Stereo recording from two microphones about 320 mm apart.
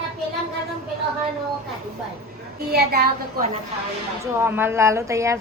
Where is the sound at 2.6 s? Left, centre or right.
Right.